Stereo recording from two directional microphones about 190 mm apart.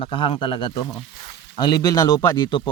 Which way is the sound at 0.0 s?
30° left (ahead or behind).